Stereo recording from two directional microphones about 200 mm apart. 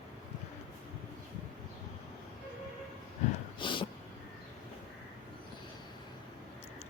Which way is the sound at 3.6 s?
25° left (ahead or behind).